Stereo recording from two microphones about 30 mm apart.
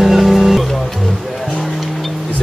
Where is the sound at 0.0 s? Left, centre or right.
Centre.